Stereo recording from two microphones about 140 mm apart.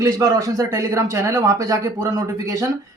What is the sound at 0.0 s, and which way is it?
Speech, 25° right (ahead or behind).